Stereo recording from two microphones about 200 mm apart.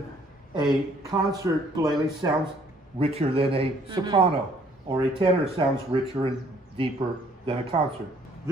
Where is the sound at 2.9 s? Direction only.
30° right (ahead or behind).